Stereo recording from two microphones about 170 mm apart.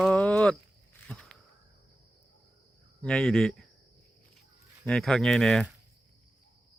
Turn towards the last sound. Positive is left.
turn(degrees=0)  # may be behind; listen again after turning